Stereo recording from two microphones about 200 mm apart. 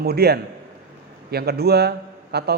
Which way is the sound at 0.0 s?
55° right (ahead or behind).